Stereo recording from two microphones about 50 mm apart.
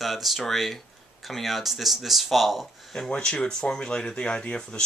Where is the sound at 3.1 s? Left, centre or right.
Centre.